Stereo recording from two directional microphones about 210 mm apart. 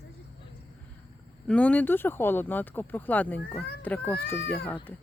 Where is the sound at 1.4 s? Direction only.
5° left (ahead or behind).